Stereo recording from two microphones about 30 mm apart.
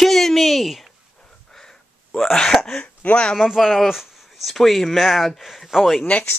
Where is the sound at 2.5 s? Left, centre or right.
Centre.